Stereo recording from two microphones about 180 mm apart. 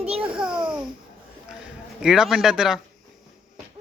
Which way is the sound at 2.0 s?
Centre (ahead or behind).